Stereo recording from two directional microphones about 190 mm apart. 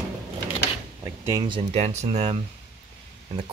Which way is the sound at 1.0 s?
15° right (ahead or behind).